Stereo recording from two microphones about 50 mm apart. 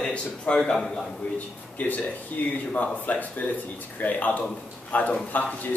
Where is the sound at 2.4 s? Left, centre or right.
Left.